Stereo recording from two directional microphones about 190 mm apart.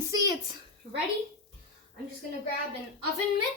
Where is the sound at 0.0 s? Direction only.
20° right (ahead or behind).